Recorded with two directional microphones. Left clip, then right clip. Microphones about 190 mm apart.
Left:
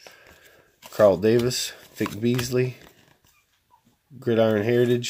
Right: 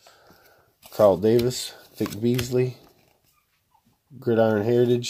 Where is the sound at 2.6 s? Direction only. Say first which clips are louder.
Right 1 dB; 5° left (ahead or behind).